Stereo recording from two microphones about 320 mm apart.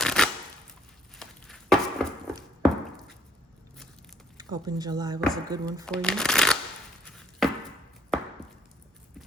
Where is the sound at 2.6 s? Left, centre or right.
Centre.